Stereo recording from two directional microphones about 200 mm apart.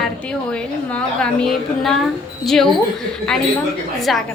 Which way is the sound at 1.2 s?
Centre (ahead or behind).